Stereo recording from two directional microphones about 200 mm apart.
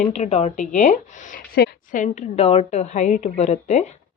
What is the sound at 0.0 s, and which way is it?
Speech, 35° left (ahead or behind).